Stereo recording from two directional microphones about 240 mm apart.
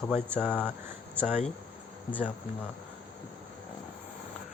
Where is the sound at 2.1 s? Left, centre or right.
Centre.